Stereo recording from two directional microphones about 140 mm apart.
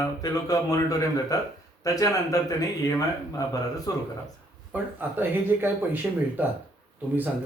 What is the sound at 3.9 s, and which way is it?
Speech, 25° left (ahead or behind).